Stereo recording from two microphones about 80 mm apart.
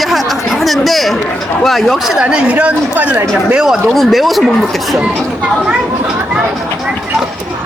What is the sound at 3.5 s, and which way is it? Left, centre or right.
Speech, centre.